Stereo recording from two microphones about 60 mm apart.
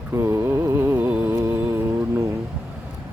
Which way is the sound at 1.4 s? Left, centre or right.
Right.